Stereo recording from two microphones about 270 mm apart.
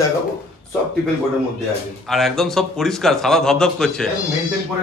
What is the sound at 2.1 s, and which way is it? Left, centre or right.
A man's voice, centre.